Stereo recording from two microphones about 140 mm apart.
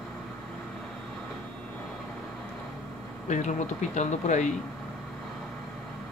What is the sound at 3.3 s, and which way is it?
Speech, 60° left (ahead or behind).